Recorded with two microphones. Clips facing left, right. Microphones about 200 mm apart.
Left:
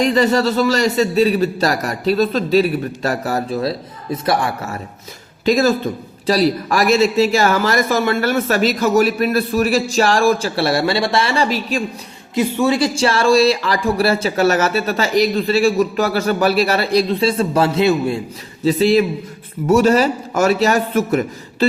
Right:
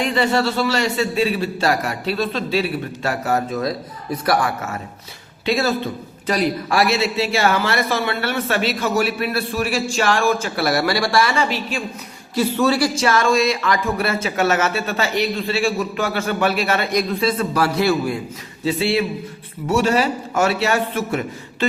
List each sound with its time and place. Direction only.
0.0 s a man's voice: 40° left (ahead or behind)
5.5 s a man's voice: 40° left (ahead or behind)
12.3 s a woman's voice: 15° left (ahead or behind)
13.0 s a man's voice: 30° left (ahead or behind)
18.6 s a man's voice: 40° left (ahead or behind)